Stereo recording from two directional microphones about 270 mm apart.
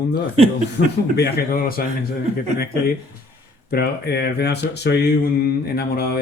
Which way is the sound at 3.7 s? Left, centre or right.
Left.